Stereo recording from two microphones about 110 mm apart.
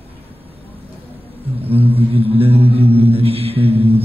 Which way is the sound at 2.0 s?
60° right (ahead or behind).